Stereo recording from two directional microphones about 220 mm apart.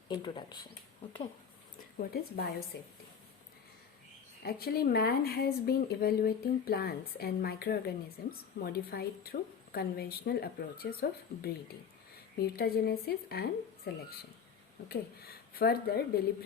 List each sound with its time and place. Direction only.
0.1 s speech: 20° left (ahead or behind)
2.0 s speech: 45° left (ahead or behind)
4.4 s speech: 45° left (ahead or behind)